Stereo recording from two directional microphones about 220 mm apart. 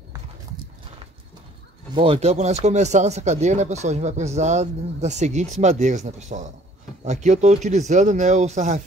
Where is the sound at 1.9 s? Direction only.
25° right (ahead or behind).